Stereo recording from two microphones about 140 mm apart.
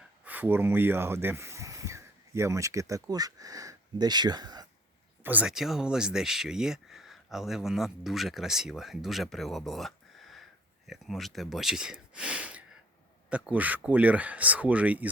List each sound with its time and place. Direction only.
0.3 s speech: 15° right (ahead or behind); by 4.6 s 30° right (ahead or behind)
5.2 s speech: 10° right (ahead or behind)